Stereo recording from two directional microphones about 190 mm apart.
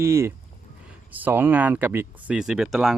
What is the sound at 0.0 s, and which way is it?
Speech, 15° right (ahead or behind).